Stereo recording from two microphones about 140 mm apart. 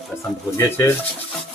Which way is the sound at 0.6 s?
15° left (ahead or behind).